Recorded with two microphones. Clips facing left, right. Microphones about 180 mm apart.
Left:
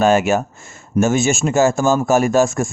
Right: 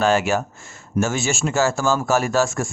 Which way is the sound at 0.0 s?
20° left (ahead or behind).